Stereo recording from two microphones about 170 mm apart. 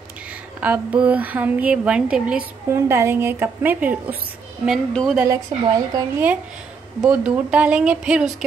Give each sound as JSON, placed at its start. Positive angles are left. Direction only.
{"t": 0.6, "sound": "a woman's voice", "side_deg": -10}
{"t": 5.5, "sound": "speech", "side_deg": -35}
{"t": 5.9, "sound": "a woman's voice", "side_deg": -15}